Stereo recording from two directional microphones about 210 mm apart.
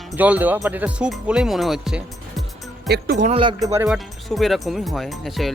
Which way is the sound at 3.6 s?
15° right (ahead or behind).